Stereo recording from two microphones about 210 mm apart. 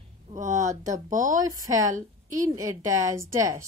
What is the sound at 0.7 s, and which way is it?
Speech, 15° right (ahead or behind).